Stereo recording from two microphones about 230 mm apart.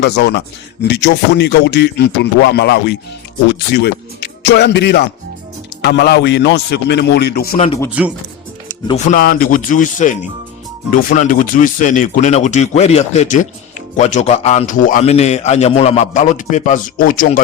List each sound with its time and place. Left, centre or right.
0.0 s a man's voice: left
7.5 s speech: left
8.0 s speech: centre
9.0 s speech: left